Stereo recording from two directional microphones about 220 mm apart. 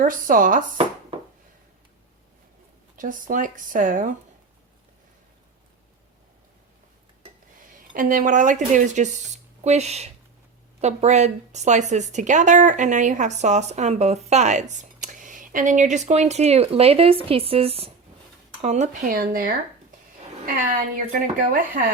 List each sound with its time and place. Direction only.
0.0 s a woman's voice: 40° right (ahead or behind)
2.9 s a woman's voice: 35° right (ahead or behind)
7.9 s a woman's voice: 40° right (ahead or behind)
20.9 s a woman's voice: 40° right (ahead or behind)